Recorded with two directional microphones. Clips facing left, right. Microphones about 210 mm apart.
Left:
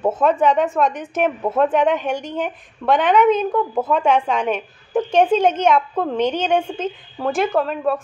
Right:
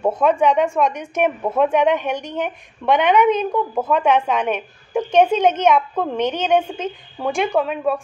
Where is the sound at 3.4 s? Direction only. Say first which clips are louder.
Left 1 dB; 5° left (ahead or behind).